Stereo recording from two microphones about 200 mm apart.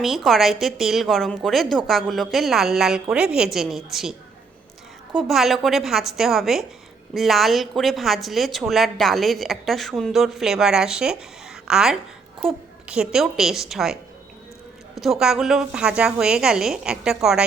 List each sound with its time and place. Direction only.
0.0 s a woman's voice: centre (ahead or behind)
5.1 s a woman's voice: centre (ahead or behind)
14.9 s a woman's voice: centre (ahead or behind)